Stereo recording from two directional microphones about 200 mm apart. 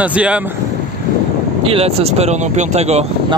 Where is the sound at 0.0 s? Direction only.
5° right (ahead or behind).